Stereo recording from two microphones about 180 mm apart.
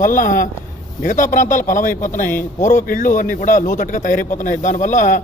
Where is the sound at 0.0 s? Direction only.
45° left (ahead or behind).